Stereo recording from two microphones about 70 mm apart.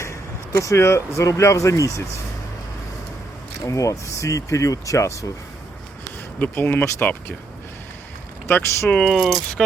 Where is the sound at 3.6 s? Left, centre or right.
Left.